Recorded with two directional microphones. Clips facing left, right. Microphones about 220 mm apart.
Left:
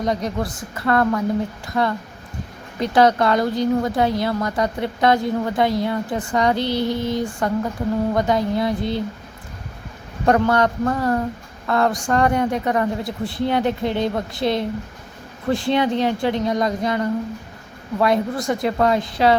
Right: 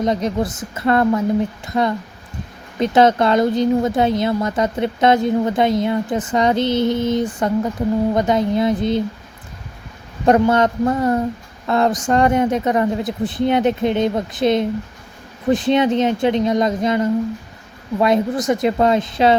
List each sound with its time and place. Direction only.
0.0 s speech: 20° right (ahead or behind)
10.2 s speech: 20° right (ahead or behind)